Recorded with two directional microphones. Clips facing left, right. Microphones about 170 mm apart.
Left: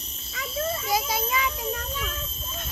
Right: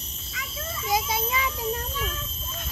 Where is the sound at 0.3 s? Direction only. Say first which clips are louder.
Left 8 dB; 40° left (ahead or behind).